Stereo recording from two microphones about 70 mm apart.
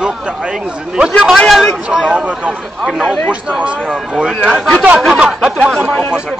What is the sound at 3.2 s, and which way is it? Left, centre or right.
Speech, centre.